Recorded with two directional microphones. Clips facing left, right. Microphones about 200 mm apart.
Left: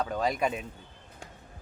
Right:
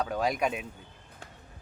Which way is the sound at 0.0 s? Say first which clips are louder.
Even; 5° right (ahead or behind).